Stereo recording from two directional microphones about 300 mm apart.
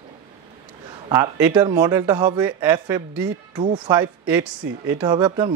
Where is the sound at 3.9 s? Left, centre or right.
Centre.